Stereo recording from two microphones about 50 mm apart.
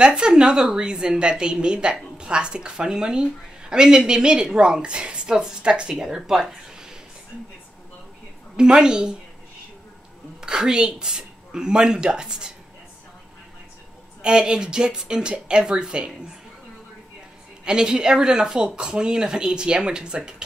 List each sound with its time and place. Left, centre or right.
0.0 s a woman's voice: centre
6.0 s speech: centre
8.5 s a woman's voice: centre
10.4 s a woman's voice: centre
14.2 s a woman's voice: centre
17.6 s a woman's voice: centre